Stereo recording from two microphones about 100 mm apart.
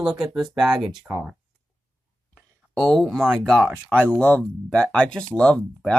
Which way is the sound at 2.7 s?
5° left (ahead or behind).